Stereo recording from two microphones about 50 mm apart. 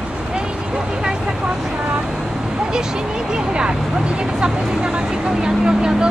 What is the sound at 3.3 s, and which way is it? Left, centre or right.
Speech, centre.